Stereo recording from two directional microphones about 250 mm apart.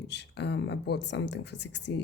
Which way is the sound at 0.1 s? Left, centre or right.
Left.